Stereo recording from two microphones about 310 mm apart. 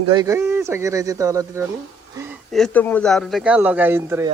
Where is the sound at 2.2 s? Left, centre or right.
Centre.